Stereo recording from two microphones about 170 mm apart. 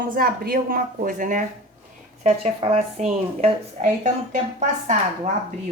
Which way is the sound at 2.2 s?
35° right (ahead or behind).